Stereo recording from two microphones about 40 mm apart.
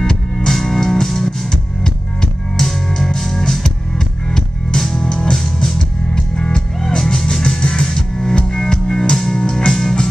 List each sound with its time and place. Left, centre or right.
0.0 s music: centre